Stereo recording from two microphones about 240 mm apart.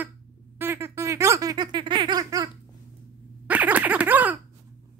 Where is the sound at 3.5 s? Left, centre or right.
Centre.